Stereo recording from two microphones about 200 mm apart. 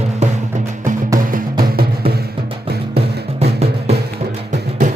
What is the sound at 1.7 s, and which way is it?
Music, 50° right (ahead or behind).